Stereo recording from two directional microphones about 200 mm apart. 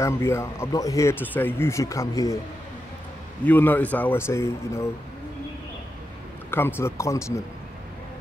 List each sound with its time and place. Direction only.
0.0 s speech: 15° left (ahead or behind)
3.4 s speech: 10° left (ahead or behind)
6.5 s speech: 10° left (ahead or behind)